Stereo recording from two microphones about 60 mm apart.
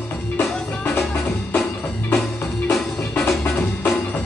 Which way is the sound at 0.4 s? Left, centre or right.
Left.